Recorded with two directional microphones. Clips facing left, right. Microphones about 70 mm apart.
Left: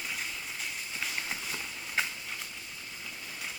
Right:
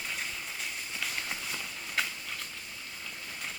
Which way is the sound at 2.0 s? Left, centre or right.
Left.